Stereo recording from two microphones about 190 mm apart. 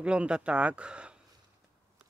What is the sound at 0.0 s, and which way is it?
Speech, 5° right (ahead or behind).